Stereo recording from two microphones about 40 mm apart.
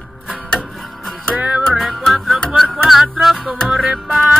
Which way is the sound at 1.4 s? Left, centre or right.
Right.